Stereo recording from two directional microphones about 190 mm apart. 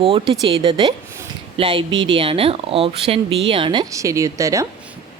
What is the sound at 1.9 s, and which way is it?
Speech, 90° right.